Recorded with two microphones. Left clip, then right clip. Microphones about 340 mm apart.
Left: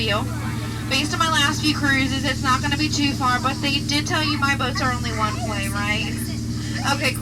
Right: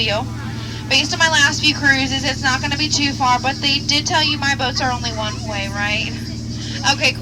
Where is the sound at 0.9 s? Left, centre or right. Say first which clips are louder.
Right 6 dB; right.